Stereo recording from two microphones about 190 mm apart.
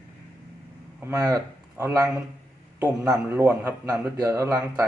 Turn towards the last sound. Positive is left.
turn(degrees=-15)  # may be behind; listen again after turning